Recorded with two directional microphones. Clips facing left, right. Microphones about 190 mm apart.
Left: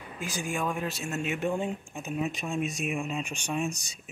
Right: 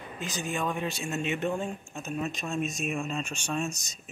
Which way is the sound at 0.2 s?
10° left (ahead or behind).